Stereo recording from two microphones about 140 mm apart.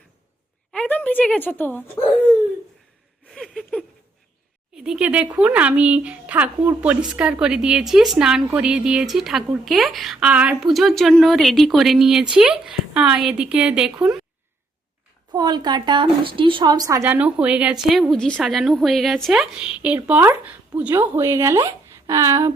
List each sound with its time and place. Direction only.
0.7 s a woman's voice: 10° left (ahead or behind)
3.3 s a sound: centre (ahead or behind)
4.7 s speech: 5° right (ahead or behind)
15.3 s speech: 30° right (ahead or behind)
17.1 s speech: 10° right (ahead or behind)